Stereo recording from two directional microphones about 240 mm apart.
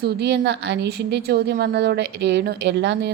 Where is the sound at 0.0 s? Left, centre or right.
Right.